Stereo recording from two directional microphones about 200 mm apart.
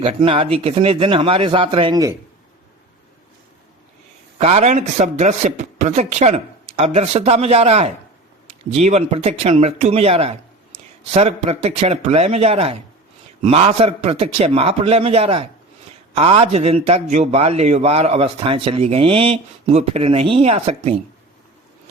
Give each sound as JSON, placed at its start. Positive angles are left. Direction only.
{"t": 0.0, "sound": "a man's voice", "side_deg": -25}
{"t": 4.4, "sound": "a man's voice", "side_deg": -35}